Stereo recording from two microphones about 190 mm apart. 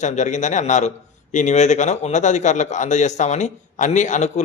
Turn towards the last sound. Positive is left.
turn(degrees=40)  # may be behind; listen again after turning